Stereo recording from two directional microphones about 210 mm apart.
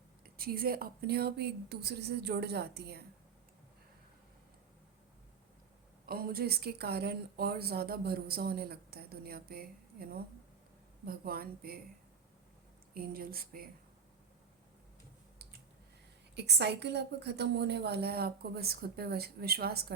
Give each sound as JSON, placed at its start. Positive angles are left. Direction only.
{"t": 0.3, "sound": "speech", "side_deg": -45}
{"t": 6.1, "sound": "speech", "side_deg": -45}
{"t": 12.9, "sound": "speech", "side_deg": -45}
{"t": 16.3, "sound": "speech", "side_deg": -50}